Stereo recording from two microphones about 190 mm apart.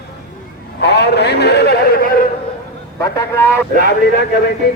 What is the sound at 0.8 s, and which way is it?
A man's voice, 60° left (ahead or behind).